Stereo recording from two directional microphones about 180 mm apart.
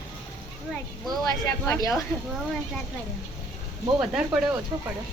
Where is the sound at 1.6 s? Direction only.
15° left (ahead or behind).